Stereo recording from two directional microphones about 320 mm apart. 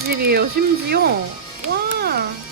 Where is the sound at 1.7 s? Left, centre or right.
Right.